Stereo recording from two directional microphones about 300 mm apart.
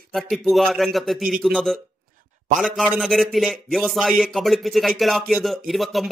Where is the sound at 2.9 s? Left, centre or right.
Centre.